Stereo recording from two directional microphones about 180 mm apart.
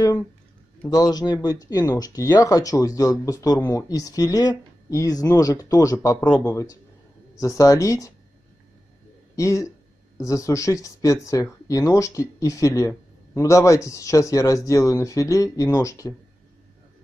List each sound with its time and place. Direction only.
0.8 s speech: 20° left (ahead or behind)
9.3 s speech: 15° left (ahead or behind)